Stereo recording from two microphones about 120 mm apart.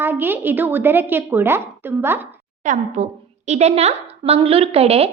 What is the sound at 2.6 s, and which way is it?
A woman's voice, 85° right.